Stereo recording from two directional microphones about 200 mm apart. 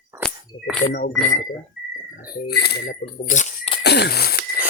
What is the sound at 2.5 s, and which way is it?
Speech, 55° left (ahead or behind).